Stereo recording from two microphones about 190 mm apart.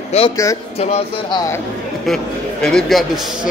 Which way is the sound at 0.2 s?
30° left (ahead or behind).